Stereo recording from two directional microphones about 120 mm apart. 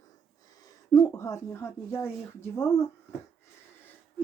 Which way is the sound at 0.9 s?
25° left (ahead or behind).